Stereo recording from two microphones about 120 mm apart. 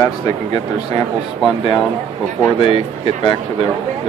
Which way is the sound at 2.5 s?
50° left (ahead or behind).